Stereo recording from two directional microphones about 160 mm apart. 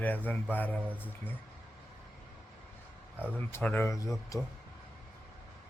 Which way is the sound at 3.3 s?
10° left (ahead or behind).